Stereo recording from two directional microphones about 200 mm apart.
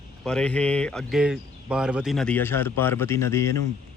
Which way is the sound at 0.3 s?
5° left (ahead or behind).